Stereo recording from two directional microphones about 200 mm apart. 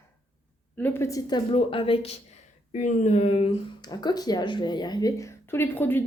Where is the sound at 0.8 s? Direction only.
10° left (ahead or behind).